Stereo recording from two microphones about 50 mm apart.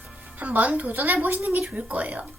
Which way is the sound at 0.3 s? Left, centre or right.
Right.